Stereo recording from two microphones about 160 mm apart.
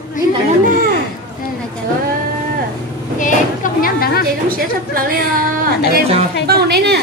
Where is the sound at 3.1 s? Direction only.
55° left (ahead or behind); by 4.2 s 70° left (ahead or behind).